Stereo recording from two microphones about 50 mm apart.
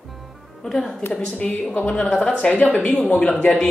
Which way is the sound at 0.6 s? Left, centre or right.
Centre.